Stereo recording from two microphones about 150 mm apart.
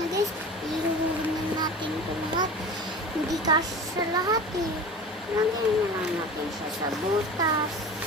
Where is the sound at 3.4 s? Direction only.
25° right (ahead or behind).